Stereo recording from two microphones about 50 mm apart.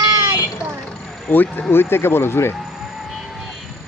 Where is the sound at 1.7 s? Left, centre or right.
Left.